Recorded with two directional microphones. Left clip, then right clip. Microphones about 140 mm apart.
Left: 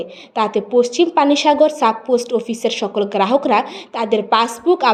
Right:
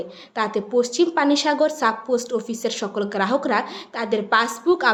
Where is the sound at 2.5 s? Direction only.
35° right (ahead or behind).